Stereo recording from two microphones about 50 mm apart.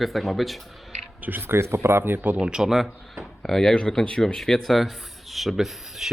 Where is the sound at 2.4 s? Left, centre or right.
Centre.